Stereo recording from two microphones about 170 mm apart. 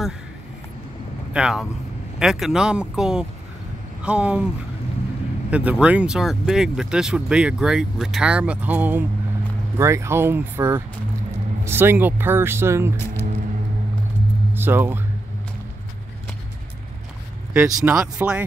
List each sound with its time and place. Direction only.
1.3 s speech: 5° right (ahead or behind)
5.5 s speech: 5° right (ahead or behind)
12.9 s speech: 15° left (ahead or behind)
14.5 s speech: 15° right (ahead or behind)
17.6 s speech: 15° right (ahead or behind)